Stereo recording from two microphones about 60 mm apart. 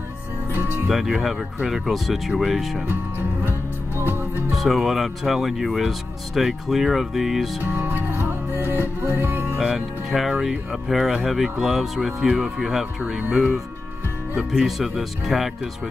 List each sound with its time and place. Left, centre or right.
0.8 s speech: centre
2.9 s music: right
4.5 s speech: centre
7.6 s music: right
9.6 s speech: centre